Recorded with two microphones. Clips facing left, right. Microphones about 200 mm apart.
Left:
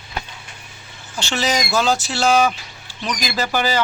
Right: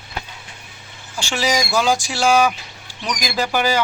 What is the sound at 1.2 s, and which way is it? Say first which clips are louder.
Speech: right 1 dB; 10° right (ahead or behind).